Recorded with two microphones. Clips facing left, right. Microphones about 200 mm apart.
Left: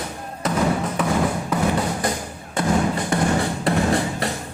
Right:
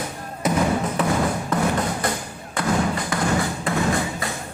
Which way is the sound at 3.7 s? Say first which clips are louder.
Left 3 dB; 35° left (ahead or behind).